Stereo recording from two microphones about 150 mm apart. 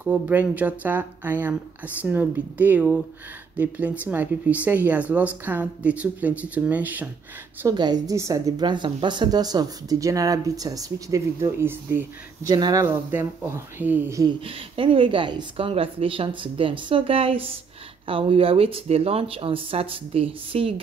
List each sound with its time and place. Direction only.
0.0 s speech: 10° right (ahead or behind)
7.6 s a woman's voice: 25° right (ahead or behind)
12.8 s speech: 15° right (ahead or behind)
14.8 s speech: 35° right (ahead or behind)